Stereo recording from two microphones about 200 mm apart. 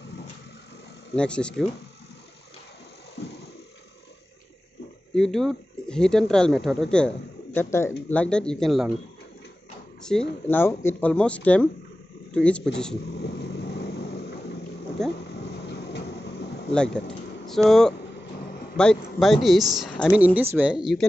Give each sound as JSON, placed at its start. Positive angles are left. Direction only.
{"t": 1.1, "sound": "a woman's voice", "side_deg": 5}
{"t": 3.2, "sound": "a sound", "side_deg": 55}
{"t": 5.1, "sound": "a woman's voice", "side_deg": 0}
{"t": 10.1, "sound": "a woman's voice", "side_deg": 0}
{"t": 10.5, "sound": "a woman's voice", "side_deg": 10}
{"t": 13.2, "sound": "vehicle", "side_deg": 55}
{"t": 15.0, "sound": "a woman's voice", "side_deg": 0}
{"t": 16.7, "sound": "a woman's voice", "side_deg": 5}